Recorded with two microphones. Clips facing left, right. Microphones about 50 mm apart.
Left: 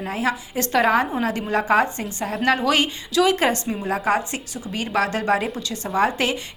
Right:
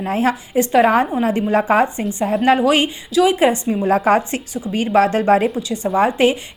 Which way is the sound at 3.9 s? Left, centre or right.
Right.